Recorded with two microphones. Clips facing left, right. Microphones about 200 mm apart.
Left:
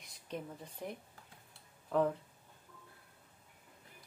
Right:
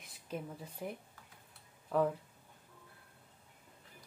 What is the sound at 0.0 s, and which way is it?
A woman's voice, 5° right (ahead or behind).